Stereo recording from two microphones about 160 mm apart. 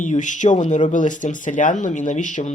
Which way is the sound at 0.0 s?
50° left (ahead or behind).